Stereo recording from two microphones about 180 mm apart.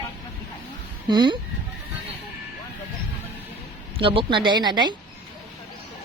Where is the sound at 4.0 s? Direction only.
30° right (ahead or behind).